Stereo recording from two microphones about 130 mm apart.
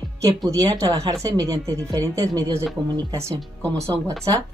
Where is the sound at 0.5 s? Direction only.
25° right (ahead or behind).